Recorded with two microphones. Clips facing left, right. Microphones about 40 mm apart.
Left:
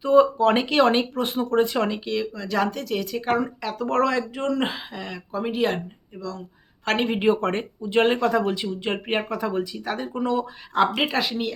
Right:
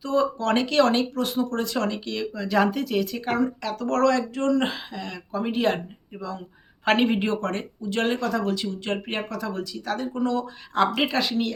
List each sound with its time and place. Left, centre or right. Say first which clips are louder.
0.0 s speech: left 7 dB; left
2.0 s speech: left 2 dB; centre
6.1 s speech: even; right
6.8 s speech: right 3 dB; centre
7.4 s speech: left 3 dB; left
11.1 s speech: even; centre